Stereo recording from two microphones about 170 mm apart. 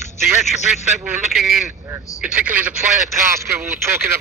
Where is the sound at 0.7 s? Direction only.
Centre (ahead or behind).